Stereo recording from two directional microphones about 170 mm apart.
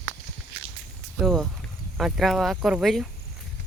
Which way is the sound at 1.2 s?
Centre (ahead or behind).